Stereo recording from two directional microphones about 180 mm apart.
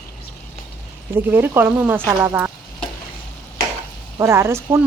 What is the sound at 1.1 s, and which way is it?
Speech, 10° right (ahead or behind).